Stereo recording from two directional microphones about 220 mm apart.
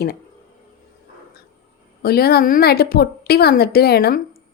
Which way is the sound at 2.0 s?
45° left (ahead or behind).